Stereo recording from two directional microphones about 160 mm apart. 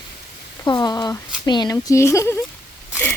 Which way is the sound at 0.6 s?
25° left (ahead or behind).